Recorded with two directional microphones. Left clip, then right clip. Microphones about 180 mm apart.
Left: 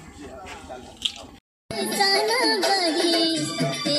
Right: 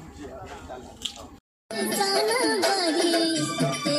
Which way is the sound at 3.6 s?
15° right (ahead or behind).